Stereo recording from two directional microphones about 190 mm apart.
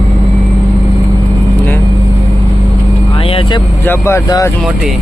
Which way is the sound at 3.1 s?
30° left (ahead or behind).